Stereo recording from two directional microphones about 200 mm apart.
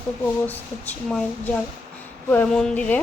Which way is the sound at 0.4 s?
10° left (ahead or behind).